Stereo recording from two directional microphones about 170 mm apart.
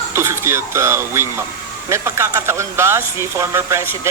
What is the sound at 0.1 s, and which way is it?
Speech, 15° right (ahead or behind).